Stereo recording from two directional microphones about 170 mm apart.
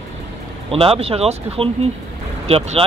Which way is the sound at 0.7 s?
35° right (ahead or behind).